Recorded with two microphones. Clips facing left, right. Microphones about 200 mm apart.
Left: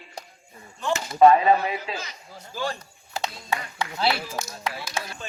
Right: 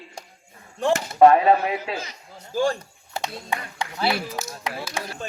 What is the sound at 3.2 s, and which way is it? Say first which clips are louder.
Speech: even; 15° right (ahead or behind).